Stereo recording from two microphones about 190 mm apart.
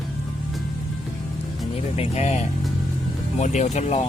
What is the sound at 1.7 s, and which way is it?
Speech, 35° left (ahead or behind).